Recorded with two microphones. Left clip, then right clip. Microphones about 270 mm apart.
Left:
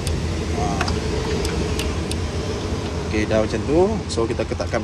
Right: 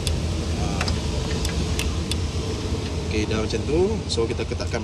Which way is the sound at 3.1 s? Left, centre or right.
Centre.